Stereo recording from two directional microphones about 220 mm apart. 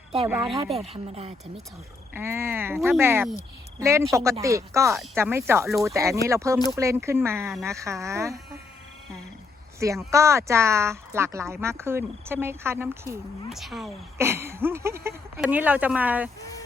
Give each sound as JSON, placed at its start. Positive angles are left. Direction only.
{"t": 0.4, "sound": "speech", "side_deg": -25}
{"t": 2.1, "sound": "speech", "side_deg": -10}
{"t": 9.8, "sound": "a woman's voice", "side_deg": -15}
{"t": 14.2, "sound": "speech", "side_deg": -10}